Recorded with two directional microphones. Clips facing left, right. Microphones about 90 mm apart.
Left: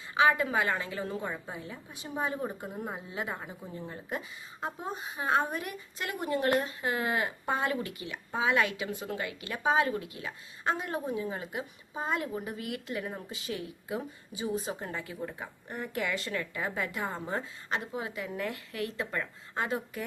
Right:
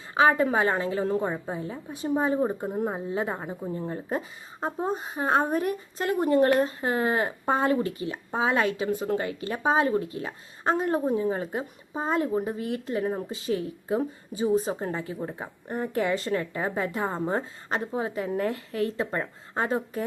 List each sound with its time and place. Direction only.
0.1 s speech: 35° right (ahead or behind)